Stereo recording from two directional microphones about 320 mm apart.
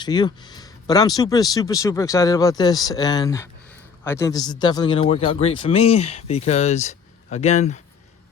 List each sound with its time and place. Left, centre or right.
0.0 s speech: centre